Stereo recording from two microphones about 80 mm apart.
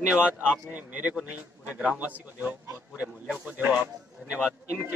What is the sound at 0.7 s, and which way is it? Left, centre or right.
A man's voice, right.